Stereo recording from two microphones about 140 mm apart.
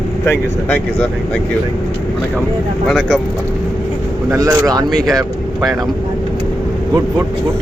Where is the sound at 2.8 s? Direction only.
Centre (ahead or behind).